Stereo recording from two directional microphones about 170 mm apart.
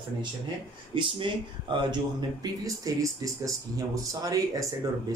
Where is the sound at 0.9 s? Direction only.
30° right (ahead or behind).